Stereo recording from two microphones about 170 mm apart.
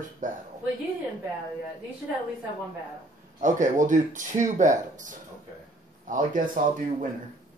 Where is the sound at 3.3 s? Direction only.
45° right (ahead or behind).